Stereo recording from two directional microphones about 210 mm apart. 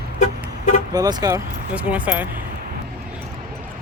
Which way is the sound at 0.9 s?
15° right (ahead or behind).